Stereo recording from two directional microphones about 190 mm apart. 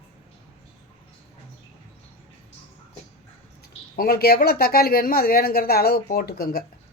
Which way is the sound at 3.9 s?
50° left (ahead or behind).